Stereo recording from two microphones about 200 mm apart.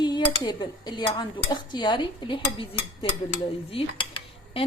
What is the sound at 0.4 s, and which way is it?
Speech, 25° left (ahead or behind).